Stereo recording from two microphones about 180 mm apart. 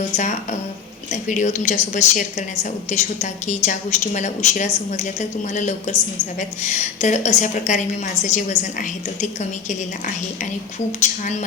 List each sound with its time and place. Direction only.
1.1 s a woman's voice: 45° left (ahead or behind)